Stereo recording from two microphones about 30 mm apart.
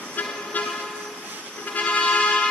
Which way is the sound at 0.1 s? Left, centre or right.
Left.